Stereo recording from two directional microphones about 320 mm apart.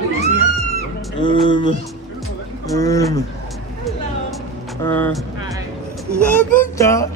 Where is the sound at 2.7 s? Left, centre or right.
Centre.